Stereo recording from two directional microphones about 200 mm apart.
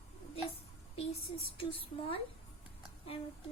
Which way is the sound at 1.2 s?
30° left (ahead or behind).